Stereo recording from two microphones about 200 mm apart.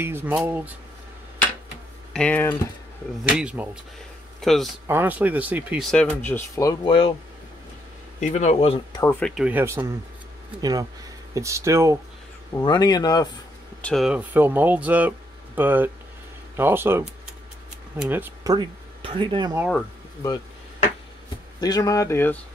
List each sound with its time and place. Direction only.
0.0 s speech: 10° right (ahead or behind)
2.1 s speech: 10° left (ahead or behind)
3.3 s speech: 5° right (ahead or behind)
4.8 s speech: 10° right (ahead or behind); by 7.1 s 25° left (ahead or behind)
8.2 s speech: 35° left (ahead or behind)
9.0 s speech: 10° left (ahead or behind)
9.3 s speech: 5° right (ahead or behind)
12.5 s speech: 20° left (ahead or behind)
13.7 s speech: 5° left (ahead or behind); by 19.5 s 25° right (ahead or behind)
21.5 s speech: 20° left (ahead or behind)